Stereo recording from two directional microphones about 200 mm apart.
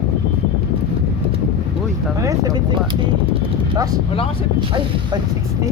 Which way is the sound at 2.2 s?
15° right (ahead or behind).